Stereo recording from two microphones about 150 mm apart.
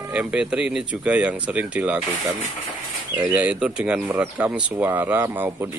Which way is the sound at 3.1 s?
10° right (ahead or behind).